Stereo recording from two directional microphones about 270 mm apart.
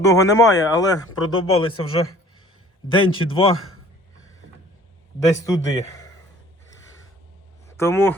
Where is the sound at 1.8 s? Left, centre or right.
Left.